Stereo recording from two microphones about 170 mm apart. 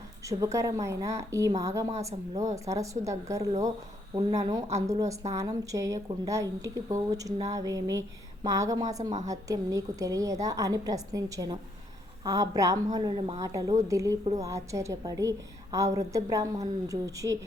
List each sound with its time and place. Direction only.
0.3 s a woman's voice: 20° right (ahead or behind)